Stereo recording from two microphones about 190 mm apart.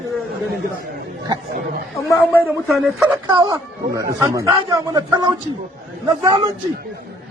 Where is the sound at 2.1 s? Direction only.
10° left (ahead or behind).